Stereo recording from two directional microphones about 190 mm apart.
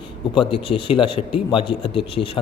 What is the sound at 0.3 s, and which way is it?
A man's voice, 30° left (ahead or behind).